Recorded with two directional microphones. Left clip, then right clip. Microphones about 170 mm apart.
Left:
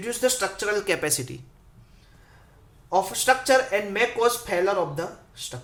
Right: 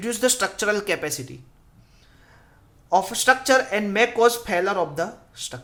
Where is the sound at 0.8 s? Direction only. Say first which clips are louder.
Even; 10° right (ahead or behind).